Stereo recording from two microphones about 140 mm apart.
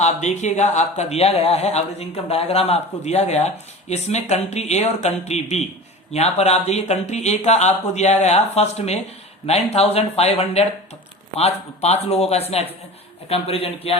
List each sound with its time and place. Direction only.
0.0 s speech: 55° left (ahead or behind)